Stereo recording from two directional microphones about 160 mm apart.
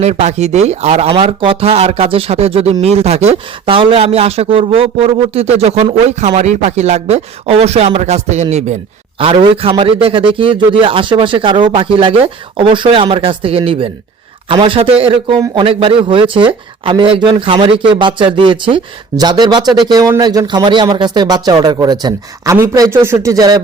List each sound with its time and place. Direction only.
0.0 s a man's voice: 45° right (ahead or behind); by 23.6 s 25° right (ahead or behind)